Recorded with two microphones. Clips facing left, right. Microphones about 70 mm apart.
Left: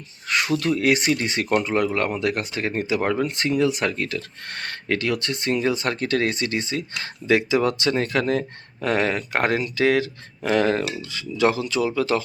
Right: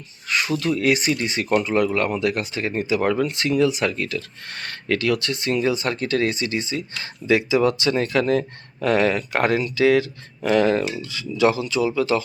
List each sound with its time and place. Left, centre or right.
0.3 s speech: left